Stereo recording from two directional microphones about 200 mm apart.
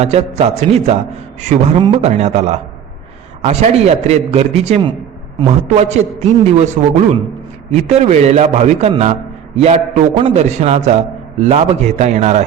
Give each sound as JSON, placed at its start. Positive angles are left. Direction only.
{"t": 0.0, "sound": "a man's voice", "side_deg": -30}